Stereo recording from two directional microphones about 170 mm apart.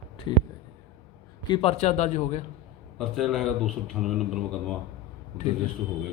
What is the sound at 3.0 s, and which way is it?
A man's voice, centre (ahead or behind).